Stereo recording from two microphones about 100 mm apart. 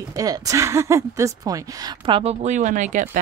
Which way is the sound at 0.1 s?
40° right (ahead or behind).